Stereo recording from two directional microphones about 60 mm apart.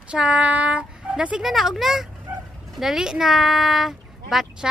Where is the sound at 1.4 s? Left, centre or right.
Centre.